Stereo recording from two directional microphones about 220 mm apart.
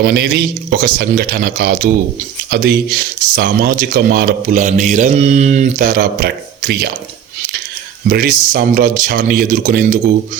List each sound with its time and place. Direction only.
0.0 s speech: 45° right (ahead or behind)
8.1 s speech: 45° right (ahead or behind)